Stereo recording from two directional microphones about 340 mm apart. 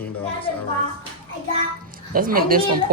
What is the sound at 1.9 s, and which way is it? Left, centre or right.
Speech, right.